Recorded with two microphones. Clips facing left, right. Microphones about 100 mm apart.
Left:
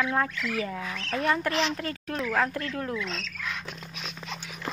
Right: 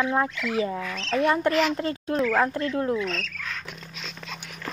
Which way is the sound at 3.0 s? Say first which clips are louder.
Right 5 dB; 50° right (ahead or behind).